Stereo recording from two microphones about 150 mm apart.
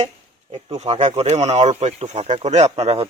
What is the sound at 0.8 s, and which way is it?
Speech, 45° right (ahead or behind).